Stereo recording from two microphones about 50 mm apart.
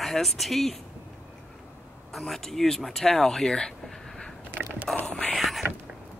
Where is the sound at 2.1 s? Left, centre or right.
Centre.